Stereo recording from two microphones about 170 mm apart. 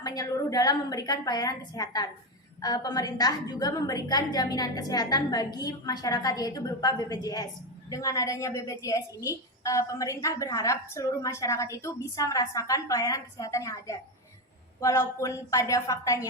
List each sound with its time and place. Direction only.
0.0 s a woman's voice: 20° left (ahead or behind)